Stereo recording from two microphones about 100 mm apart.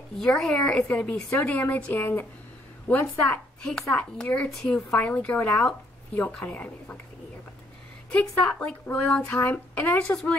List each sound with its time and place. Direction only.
0.2 s a woman's voice: 5° left (ahead or behind)
8.1 s speech: 15° left (ahead or behind)